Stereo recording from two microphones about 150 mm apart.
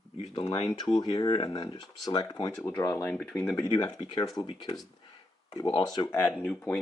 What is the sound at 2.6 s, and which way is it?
Speech, 15° left (ahead or behind).